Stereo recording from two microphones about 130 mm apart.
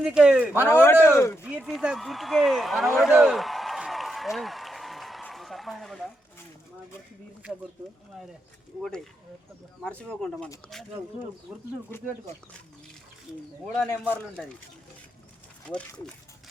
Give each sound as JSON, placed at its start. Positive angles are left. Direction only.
{"t": 0.0, "sound": "speech", "side_deg": -5}
{"t": 0.7, "sound": "speech", "side_deg": 20}
{"t": 1.5, "sound": "speech", "side_deg": -10}
{"t": 9.8, "sound": "speech", "side_deg": 10}
{"t": 11.9, "sound": "speech", "side_deg": 15}
{"t": 13.7, "sound": "speech", "side_deg": 5}